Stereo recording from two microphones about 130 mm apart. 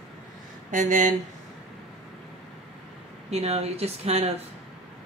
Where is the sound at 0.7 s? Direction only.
75° right (ahead or behind).